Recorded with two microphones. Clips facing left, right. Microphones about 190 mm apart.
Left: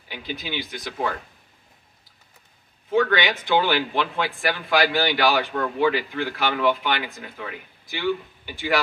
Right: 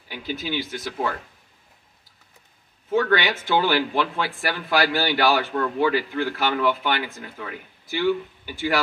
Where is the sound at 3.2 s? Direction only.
15° left (ahead or behind).